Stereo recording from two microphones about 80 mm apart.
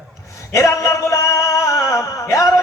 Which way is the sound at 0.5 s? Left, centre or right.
Left.